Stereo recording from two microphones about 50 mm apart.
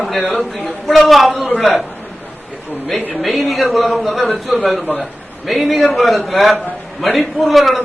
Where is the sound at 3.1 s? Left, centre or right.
Centre.